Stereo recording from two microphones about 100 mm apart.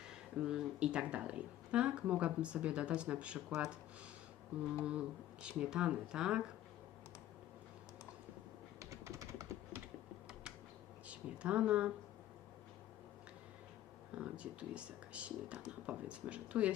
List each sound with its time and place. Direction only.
0.3 s speech: 10° right (ahead or behind)
4.8 s speech: 10° right (ahead or behind)
8.8 s typing: 35° right (ahead or behind)
11.1 s speech: 10° right (ahead or behind)
14.2 s speech: 10° right (ahead or behind)